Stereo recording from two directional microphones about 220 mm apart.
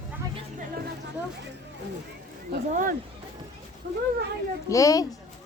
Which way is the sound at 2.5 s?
40° right (ahead or behind).